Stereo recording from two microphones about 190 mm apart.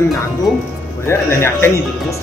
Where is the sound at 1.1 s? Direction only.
10° left (ahead or behind).